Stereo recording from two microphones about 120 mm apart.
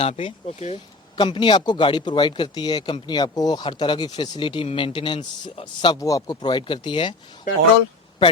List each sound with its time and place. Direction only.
0.0 s speech: 50° left (ahead or behind)
1.1 s speech: 40° left (ahead or behind)
5.9 s speech: 30° left (ahead or behind)
7.5 s speech: 90° left